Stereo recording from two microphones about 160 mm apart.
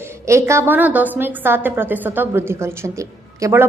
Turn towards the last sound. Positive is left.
turn(degrees=-15)  # may be behind; listen again after turning